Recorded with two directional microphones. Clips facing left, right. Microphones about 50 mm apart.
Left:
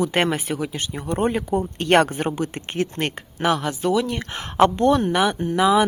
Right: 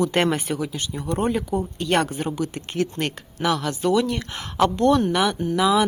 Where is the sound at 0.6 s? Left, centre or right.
Left.